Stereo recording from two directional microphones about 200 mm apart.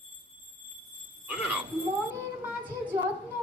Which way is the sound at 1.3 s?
5° right (ahead or behind).